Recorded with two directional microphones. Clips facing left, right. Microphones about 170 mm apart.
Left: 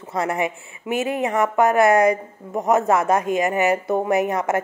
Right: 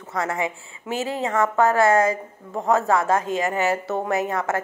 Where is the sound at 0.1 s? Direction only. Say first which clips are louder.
Left 3 dB; 20° left (ahead or behind).